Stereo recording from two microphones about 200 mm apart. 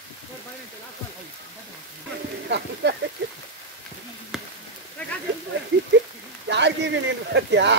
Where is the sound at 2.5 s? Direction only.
60° right (ahead or behind).